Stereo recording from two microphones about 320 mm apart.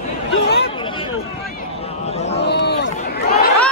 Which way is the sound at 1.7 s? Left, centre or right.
Centre.